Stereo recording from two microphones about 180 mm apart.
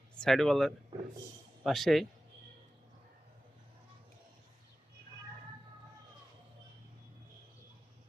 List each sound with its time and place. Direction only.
0.2 s speech: centre (ahead or behind)
0.9 s a man's voice: 25° right (ahead or behind)
1.6 s speech: centre (ahead or behind)